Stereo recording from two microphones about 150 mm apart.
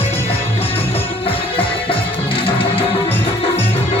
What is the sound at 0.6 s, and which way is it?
Music, 40° left (ahead or behind).